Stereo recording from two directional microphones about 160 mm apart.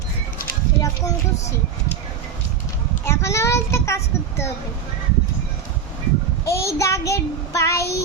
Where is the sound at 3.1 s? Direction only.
15° left (ahead or behind).